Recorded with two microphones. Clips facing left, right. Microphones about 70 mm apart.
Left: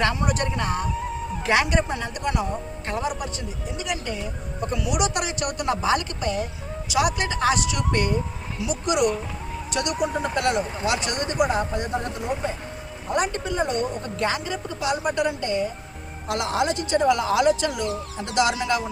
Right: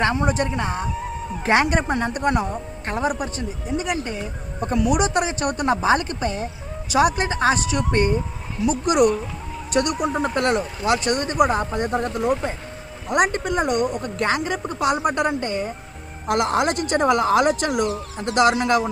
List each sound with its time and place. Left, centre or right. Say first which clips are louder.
0.0 s speech: right 3 dB; right
1.5 s speech: right 3 dB; right
3.8 s speech: right 4 dB; right
8.6 s speech: right 5 dB; right
13.3 s speech: right 3 dB; right
16.3 s speech: right 4 dB; right